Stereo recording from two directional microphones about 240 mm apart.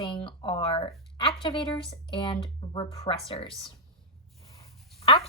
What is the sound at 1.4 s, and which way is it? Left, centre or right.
A woman's voice, left.